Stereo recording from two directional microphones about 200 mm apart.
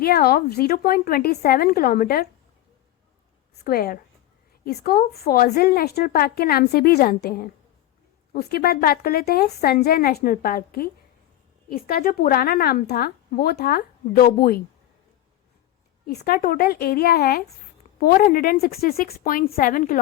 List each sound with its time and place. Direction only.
0.0 s a woman's voice: 50° left (ahead or behind)
3.6 s a woman's voice: 50° left (ahead or behind)
16.0 s a woman's voice: 50° left (ahead or behind)